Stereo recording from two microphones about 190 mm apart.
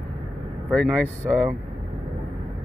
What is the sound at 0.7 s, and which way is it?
Speech, 5° left (ahead or behind).